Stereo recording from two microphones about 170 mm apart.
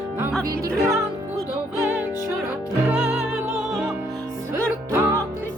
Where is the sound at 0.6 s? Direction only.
20° right (ahead or behind).